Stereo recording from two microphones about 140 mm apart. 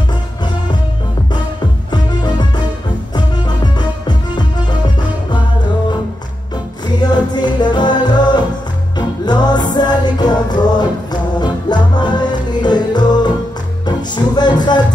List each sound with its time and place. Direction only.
1.9 s music: 30° left (ahead or behind)
7.0 s music: 30° left (ahead or behind)